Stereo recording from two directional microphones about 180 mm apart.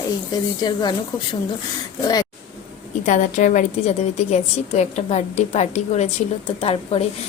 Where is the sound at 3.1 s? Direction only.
45° left (ahead or behind).